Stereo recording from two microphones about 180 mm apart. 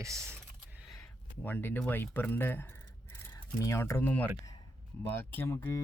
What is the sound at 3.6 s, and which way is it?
Speech, 15° left (ahead or behind).